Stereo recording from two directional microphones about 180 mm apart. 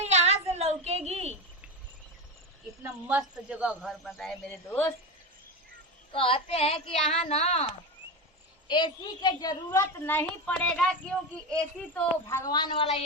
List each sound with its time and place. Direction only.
0.0 s a sound: 35° right (ahead or behind)
2.8 s a woman's voice: 5° right (ahead or behind)
4.4 s a woman's voice: 10° left (ahead or behind)
6.1 s speech: 30° left (ahead or behind)
8.6 s a woman's voice: 25° left (ahead or behind)